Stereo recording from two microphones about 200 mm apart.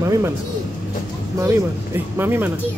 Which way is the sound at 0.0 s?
15° right (ahead or behind).